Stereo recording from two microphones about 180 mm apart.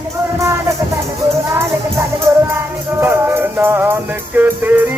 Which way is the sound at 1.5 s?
15° right (ahead or behind).